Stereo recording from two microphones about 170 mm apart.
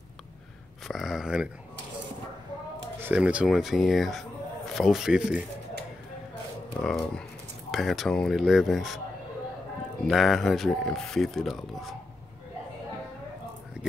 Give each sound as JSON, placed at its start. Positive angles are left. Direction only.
{"t": 0.8, "sound": "speech", "side_deg": 0}
{"t": 3.0, "sound": "speech", "side_deg": -10}
{"t": 6.8, "sound": "speech", "side_deg": 5}
{"t": 10.0, "sound": "speech", "side_deg": 0}